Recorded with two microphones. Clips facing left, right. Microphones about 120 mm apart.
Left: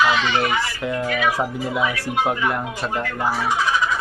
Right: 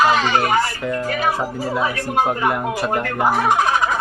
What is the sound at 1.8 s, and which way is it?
Speech, 40° right (ahead or behind).